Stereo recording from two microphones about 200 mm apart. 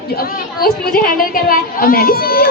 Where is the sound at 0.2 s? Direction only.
50° left (ahead or behind).